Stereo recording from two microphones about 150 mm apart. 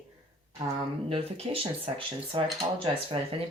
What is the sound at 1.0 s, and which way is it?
Speech, 40° right (ahead or behind).